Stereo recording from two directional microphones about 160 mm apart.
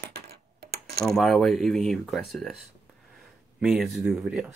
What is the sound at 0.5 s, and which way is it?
Coin, 80° right.